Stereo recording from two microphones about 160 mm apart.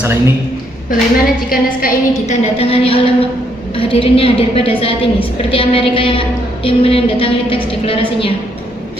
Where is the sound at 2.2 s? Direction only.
45° left (ahead or behind).